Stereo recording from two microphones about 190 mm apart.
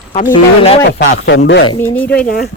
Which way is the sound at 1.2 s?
85° left.